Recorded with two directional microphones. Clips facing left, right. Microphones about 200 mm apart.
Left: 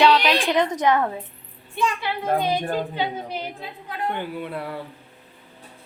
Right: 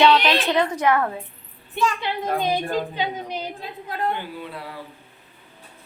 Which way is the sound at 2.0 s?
15° right (ahead or behind).